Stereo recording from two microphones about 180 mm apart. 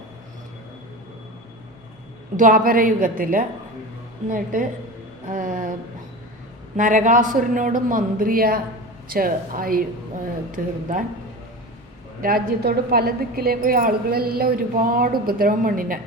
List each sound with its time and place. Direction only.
2.3 s a man's voice: 50° right (ahead or behind)
5.3 s a sound: 50° right (ahead or behind)
6.7 s a man's voice: 45° right (ahead or behind)
12.2 s a woman's voice: 55° right (ahead or behind)